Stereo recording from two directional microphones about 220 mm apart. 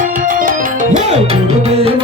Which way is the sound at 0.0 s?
40° right (ahead or behind).